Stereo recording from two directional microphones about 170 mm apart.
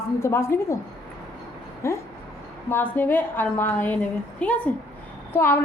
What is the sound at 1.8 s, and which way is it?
A woman's voice, 15° left (ahead or behind).